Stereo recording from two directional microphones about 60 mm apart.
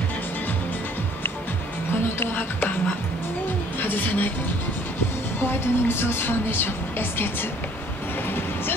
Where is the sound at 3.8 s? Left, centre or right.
Left.